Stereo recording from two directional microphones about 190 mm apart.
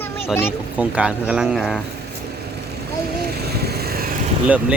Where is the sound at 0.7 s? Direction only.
5° right (ahead or behind).